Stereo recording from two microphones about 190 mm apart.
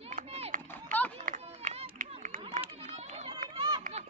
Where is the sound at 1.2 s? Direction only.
45° right (ahead or behind).